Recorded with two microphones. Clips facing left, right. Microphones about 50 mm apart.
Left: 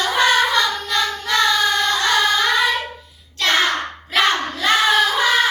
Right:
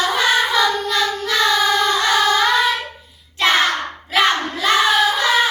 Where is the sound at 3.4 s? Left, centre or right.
Centre.